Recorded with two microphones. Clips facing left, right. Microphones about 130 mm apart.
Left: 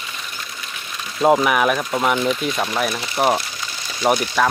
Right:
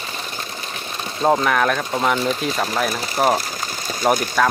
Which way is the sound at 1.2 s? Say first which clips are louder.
Left 2 dB; 10° left (ahead or behind).